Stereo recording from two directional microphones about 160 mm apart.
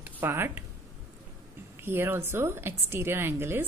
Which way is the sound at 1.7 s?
15° right (ahead or behind).